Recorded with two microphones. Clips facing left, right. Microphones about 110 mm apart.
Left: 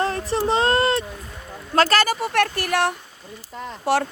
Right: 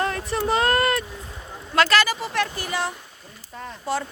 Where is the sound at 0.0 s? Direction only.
35° left (ahead or behind).